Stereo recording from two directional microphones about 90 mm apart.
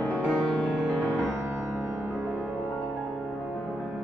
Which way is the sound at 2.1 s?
5° left (ahead or behind).